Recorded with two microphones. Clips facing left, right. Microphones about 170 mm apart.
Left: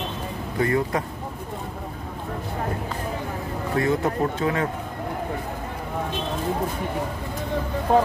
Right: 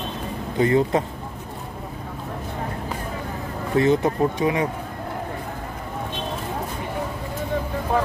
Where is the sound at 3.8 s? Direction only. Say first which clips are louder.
Right 4 dB; 20° right (ahead or behind).